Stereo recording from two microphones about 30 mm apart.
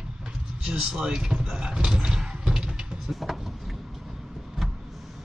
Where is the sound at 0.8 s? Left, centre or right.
Right.